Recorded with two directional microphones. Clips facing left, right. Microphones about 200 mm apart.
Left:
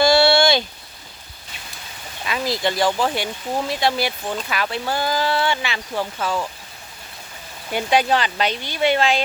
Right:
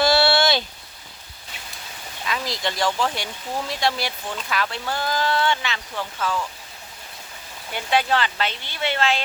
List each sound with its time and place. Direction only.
0.0 s a sound: 5° right (ahead or behind)
2.2 s speech: 5° left (ahead or behind)
5.9 s speech: 35° left (ahead or behind)
7.7 s speech: 15° left (ahead or behind)